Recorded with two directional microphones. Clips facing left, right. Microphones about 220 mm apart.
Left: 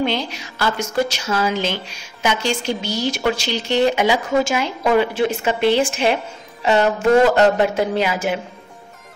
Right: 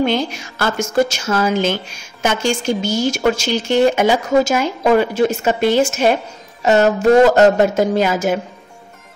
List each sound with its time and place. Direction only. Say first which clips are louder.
0.0 s a woman's voice: right 4 dB; 50° right (ahead or behind)